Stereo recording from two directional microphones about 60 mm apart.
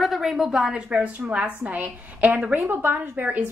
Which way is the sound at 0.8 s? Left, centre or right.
Centre.